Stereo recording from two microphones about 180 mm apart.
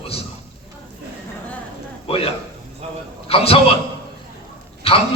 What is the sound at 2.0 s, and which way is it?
A man's voice, 30° left (ahead or behind).